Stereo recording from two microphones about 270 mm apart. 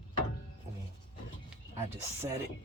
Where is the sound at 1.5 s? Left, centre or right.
Centre.